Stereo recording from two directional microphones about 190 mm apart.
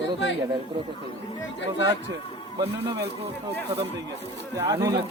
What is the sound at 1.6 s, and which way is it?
Speech, 75° left (ahead or behind).